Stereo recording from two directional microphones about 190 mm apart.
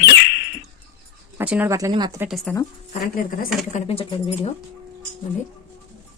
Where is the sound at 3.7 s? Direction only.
30° left (ahead or behind).